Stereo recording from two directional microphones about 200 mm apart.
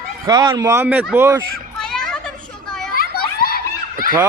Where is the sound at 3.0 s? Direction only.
50° left (ahead or behind).